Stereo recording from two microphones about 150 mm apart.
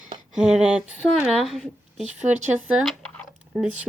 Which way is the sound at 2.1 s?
50° right (ahead or behind).